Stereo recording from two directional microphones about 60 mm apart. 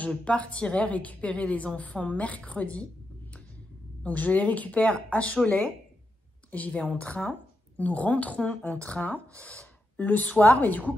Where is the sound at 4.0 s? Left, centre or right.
Left.